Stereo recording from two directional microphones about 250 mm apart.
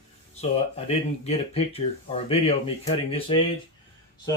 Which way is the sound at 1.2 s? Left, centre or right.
Left.